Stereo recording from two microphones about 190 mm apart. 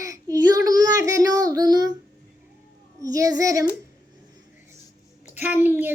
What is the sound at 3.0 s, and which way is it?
Speech, 20° right (ahead or behind).